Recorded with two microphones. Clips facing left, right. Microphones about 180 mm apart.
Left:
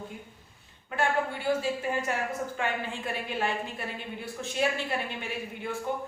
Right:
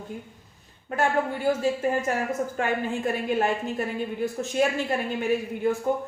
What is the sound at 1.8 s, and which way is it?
Speech, 40° right (ahead or behind).